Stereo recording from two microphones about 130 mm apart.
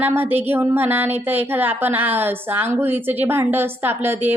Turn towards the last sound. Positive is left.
turn(degrees=-15)  # may be behind; listen again after turning